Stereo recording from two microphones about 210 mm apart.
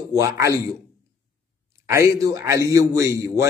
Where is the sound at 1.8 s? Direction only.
15° right (ahead or behind).